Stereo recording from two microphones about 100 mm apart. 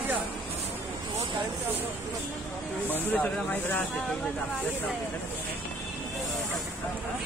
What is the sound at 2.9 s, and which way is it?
Speech, 20° left (ahead or behind).